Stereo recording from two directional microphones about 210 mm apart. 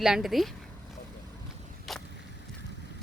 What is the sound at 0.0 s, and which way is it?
Speech, centre (ahead or behind).